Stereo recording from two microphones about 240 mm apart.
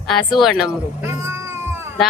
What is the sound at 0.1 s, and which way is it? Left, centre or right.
A woman's voice, centre.